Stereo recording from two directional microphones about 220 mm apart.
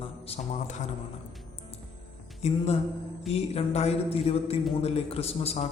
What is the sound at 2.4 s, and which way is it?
A man's voice, 30° left (ahead or behind).